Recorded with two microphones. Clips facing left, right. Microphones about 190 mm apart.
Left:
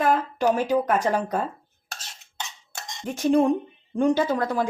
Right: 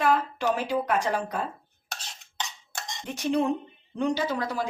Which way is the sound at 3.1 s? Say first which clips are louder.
Left 6 dB; 45° left (ahead or behind).